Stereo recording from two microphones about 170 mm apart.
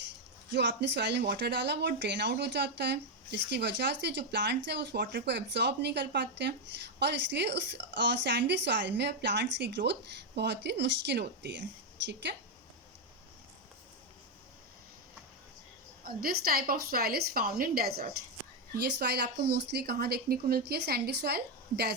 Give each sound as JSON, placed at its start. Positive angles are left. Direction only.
{"t": 0.5, "sound": "speech", "side_deg": -85}
{"t": 16.0, "sound": "a woman's voice", "side_deg": -60}